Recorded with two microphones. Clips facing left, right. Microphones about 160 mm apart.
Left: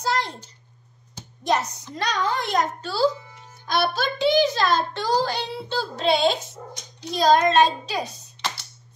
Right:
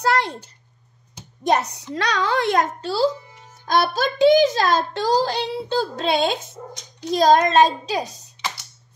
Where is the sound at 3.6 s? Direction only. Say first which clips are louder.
Right 3 dB; 45° right (ahead or behind).